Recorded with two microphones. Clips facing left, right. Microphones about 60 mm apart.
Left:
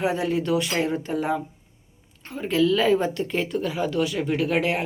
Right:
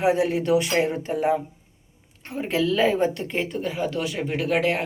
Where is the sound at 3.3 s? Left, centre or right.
Centre.